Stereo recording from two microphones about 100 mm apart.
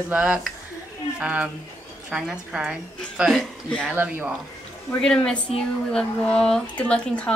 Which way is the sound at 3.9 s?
20° right (ahead or behind).